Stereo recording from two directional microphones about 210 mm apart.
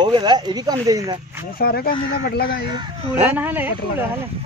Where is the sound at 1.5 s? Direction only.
45° left (ahead or behind).